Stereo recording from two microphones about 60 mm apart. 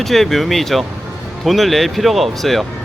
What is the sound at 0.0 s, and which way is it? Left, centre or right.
Speech, centre.